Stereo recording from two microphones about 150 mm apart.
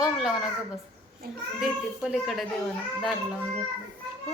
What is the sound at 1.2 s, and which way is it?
Speech, 90° right.